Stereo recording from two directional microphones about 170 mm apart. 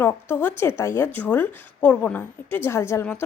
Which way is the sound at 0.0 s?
10° left (ahead or behind).